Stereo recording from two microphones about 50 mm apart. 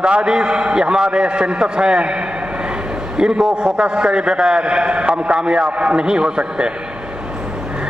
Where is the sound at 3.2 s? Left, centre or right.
Centre.